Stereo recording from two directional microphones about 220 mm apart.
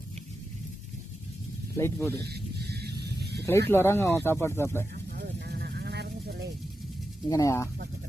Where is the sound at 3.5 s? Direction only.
10° left (ahead or behind).